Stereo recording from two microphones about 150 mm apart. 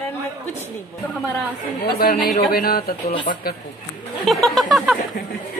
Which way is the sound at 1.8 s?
80° left.